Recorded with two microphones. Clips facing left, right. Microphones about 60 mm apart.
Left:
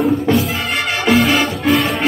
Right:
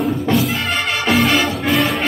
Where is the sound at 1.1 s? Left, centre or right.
Centre.